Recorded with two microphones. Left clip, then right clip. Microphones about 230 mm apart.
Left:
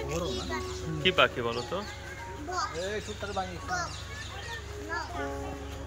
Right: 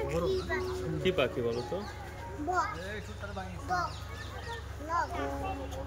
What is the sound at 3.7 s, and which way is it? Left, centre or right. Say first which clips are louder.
Speech: right 2 dB; centre.